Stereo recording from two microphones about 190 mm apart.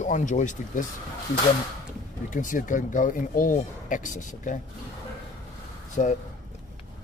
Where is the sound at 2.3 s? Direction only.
45° left (ahead or behind).